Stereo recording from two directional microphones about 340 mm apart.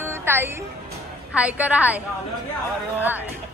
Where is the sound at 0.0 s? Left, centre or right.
Centre.